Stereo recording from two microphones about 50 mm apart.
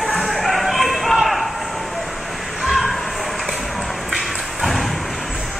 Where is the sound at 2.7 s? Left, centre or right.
Centre.